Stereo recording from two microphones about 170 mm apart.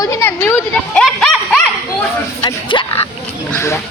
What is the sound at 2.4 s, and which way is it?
Speech, 30° left (ahead or behind).